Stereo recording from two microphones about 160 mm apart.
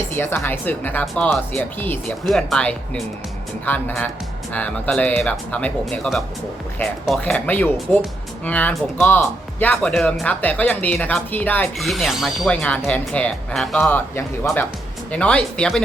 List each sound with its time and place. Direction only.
0.2 s speech: 15° left (ahead or behind)
11.8 s speech: centre (ahead or behind)